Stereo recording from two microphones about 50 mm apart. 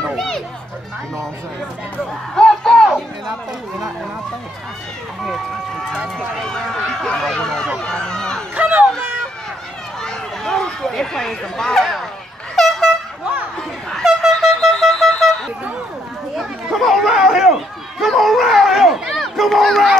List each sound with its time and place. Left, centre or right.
2.3 s crowd: centre
6.1 s speech: centre
8.5 s a sound: right
10.0 s a sound: centre
12.5 s air horn: centre
13.2 s chatter: right
14.0 s vehicle: centre
14.7 s a sound: centre
16.3 s chatter: centre
18.0 s dog: centre
19.0 s run: centre